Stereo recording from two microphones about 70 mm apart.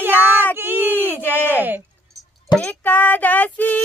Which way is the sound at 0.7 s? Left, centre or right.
Right.